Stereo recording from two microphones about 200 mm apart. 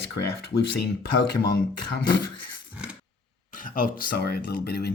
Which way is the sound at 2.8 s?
5° right (ahead or behind).